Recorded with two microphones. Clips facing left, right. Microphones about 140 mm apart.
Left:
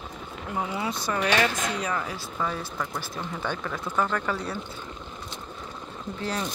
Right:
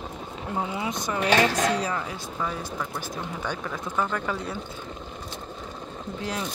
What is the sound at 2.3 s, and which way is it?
Speech, 10° right (ahead or behind).